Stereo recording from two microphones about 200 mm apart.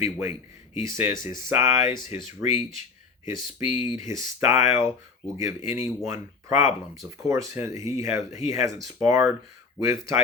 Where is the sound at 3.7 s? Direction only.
25° left (ahead or behind).